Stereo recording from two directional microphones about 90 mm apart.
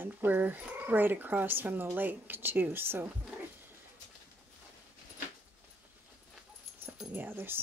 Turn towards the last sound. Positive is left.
turn(degrees=-25)  # may be behind; listen again after turning